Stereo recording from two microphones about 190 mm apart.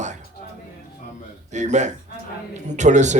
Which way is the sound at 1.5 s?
40° right (ahead or behind).